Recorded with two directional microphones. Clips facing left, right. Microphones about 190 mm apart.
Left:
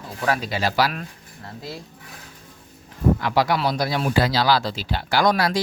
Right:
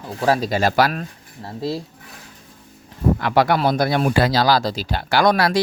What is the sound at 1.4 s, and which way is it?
Speech, 30° right (ahead or behind).